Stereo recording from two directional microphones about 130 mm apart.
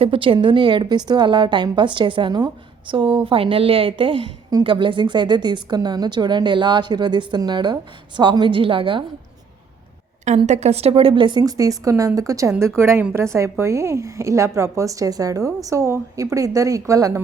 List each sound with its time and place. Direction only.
0.0 s a woman's voice: 40° right (ahead or behind)
10.2 s a woman's voice: 60° right (ahead or behind); by 17.2 s 25° right (ahead or behind)